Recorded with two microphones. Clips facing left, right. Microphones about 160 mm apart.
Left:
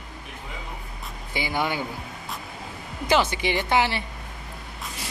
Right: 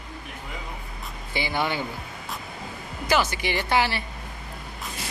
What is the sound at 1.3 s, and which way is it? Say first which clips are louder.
Speech: even; 15° left (ahead or behind).